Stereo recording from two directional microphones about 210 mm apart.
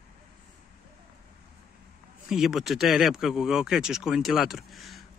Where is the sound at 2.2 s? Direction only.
Centre (ahead or behind).